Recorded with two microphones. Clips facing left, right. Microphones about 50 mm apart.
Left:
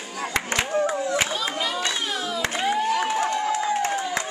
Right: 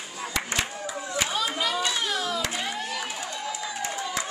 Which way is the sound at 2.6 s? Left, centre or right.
Centre.